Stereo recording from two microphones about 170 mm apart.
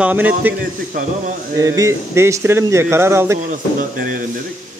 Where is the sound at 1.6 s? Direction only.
20° right (ahead or behind).